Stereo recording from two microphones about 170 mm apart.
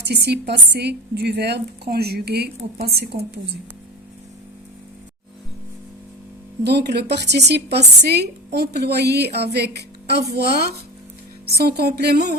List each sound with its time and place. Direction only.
0.1 s a woman's voice: 80° right
6.7 s a woman's voice: 75° right (ahead or behind)